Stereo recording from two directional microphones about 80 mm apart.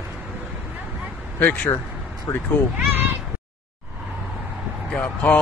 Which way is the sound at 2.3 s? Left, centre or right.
Left.